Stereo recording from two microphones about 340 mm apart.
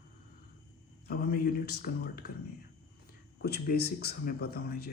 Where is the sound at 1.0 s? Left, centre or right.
Left.